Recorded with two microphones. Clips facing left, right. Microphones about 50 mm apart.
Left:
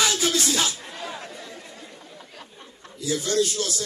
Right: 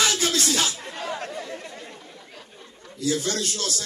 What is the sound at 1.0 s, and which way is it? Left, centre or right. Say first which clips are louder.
Chatter: right 5 dB; right.